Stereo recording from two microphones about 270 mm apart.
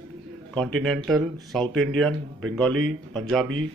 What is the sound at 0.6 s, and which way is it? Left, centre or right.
Speech, centre.